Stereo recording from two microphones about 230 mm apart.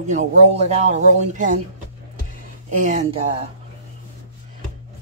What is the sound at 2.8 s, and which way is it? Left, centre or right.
Speech, right.